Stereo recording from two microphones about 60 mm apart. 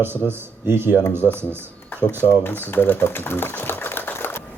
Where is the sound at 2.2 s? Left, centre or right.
Left.